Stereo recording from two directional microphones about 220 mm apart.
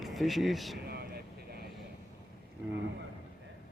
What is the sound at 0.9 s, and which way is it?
Vehicle, 45° right (ahead or behind).